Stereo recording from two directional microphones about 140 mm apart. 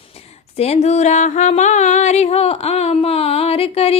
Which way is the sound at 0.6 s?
50° left (ahead or behind).